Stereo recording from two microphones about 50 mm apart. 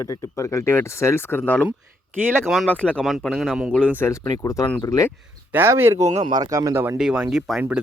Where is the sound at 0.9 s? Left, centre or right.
Left.